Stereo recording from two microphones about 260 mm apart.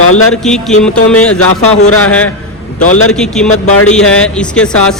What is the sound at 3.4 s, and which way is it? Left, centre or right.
Speech, left.